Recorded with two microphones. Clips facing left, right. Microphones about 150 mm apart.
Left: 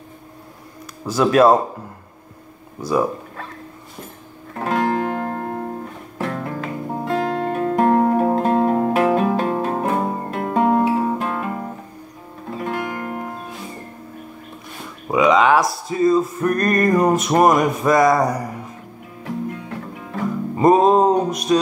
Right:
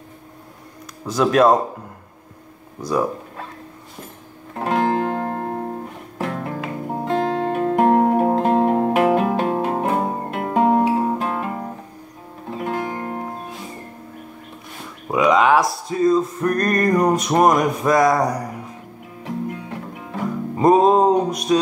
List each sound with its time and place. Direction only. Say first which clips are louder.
1.0 s speech: left 1 dB; 5° left (ahead or behind)
4.6 s music: right 1 dB; 20° right (ahead or behind)
15.0 s a sound: left 1 dB; centre (ahead or behind)
19.2 s music: even; 15° right (ahead or behind)
20.5 s music: even; centre (ahead or behind)